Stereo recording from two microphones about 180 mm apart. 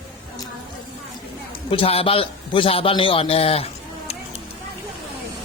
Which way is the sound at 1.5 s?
30° left (ahead or behind).